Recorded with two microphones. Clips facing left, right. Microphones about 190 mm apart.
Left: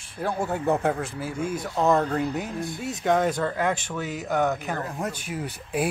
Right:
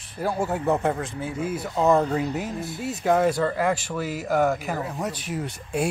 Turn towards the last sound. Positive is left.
turn(degrees=5)  # may be behind; listen again after turning